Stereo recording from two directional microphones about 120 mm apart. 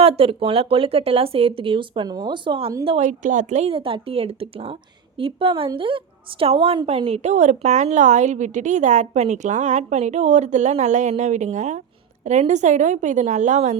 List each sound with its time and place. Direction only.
0.0 s a woman's voice: 55° right (ahead or behind)
3.0 s a woman's voice: 85° right